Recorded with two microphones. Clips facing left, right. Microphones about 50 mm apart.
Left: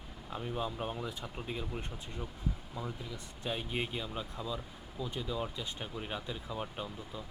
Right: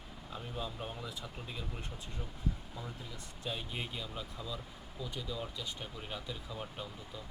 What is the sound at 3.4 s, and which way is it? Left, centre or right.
Speech, left.